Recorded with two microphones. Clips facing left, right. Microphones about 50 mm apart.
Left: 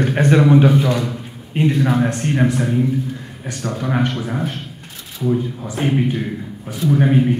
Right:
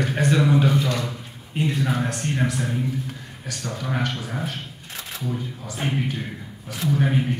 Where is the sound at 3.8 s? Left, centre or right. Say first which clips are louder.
Left 7 dB; centre.